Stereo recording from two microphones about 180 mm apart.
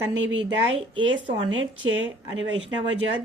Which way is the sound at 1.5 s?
90° right.